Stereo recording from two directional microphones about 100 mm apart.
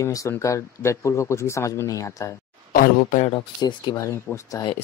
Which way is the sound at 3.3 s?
50° left (ahead or behind).